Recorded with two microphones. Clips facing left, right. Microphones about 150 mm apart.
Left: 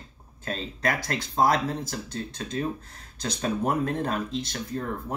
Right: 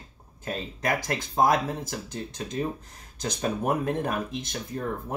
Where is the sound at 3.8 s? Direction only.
15° right (ahead or behind).